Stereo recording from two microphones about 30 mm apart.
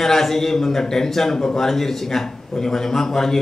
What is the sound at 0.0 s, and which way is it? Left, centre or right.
A man's voice, centre.